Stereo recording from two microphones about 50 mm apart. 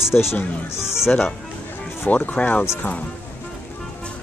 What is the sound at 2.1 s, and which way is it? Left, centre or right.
Speech, left.